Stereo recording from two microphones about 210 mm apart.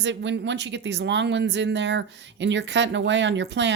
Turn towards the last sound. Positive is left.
turn(degrees=-55)  # may be behind; listen again after turning